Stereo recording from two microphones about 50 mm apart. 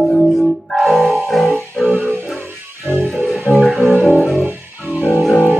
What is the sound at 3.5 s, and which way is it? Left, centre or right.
Music, right.